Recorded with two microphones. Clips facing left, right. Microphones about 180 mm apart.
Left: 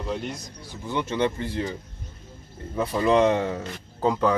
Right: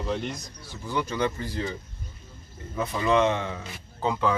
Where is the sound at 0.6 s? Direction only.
20° left (ahead or behind).